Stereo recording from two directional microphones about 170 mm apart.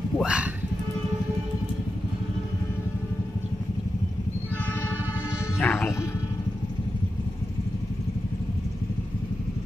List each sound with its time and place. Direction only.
0.2 s music: 5° right (ahead or behind)
5.6 s music: 10° left (ahead or behind)